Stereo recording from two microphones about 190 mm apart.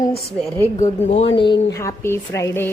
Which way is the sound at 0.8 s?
35° left (ahead or behind).